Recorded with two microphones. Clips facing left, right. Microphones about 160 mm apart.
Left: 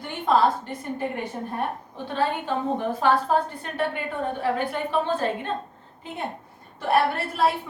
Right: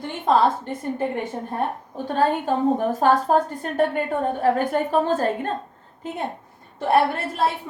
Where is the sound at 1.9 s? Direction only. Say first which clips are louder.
Right 5 dB; 45° right (ahead or behind).